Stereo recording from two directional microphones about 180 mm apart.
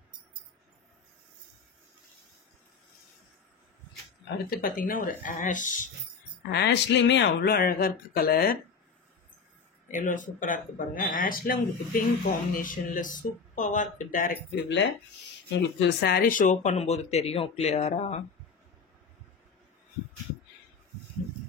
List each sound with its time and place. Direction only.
4.5 s speech: 55° left (ahead or behind)
6.5 s speech: 70° left (ahead or behind)
9.8 s speech: 45° left (ahead or behind)
14.5 s speech: 85° left
15.5 s speech: 65° left (ahead or behind); by 16.7 s 50° left (ahead or behind)
16.7 s speech: 35° left (ahead or behind)